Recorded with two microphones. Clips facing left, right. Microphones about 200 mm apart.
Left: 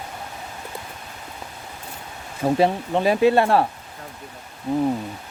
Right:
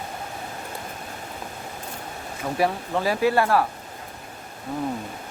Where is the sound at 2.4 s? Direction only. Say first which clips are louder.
Left 5 dB; 25° left (ahead or behind).